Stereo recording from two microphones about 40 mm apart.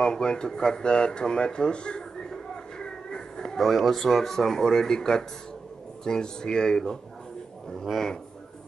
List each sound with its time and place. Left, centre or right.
0.0 s speech: left
7.8 s speech: centre